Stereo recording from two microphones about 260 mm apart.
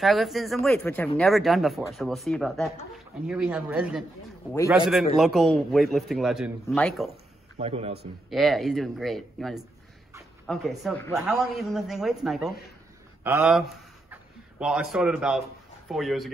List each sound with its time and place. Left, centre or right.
0.0 s a man's voice: centre
7.5 s a man's voice: right
8.3 s a man's voice: centre